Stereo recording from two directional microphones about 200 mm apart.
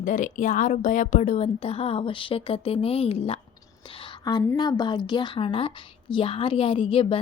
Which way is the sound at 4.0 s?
20° left (ahead or behind).